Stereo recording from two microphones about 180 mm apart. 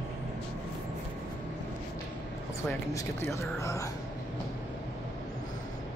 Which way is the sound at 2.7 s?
15° left (ahead or behind).